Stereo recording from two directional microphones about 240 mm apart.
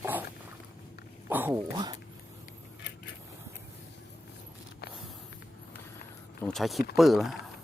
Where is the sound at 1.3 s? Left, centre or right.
Centre.